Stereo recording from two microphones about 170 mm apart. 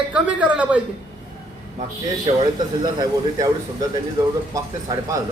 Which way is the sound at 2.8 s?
25° right (ahead or behind).